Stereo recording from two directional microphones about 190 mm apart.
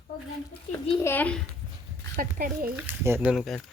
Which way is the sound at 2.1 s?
45° right (ahead or behind).